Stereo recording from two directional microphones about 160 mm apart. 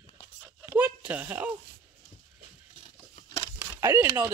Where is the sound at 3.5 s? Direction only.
15° right (ahead or behind).